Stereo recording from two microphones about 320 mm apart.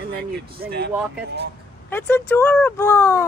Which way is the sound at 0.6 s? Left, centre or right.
Right.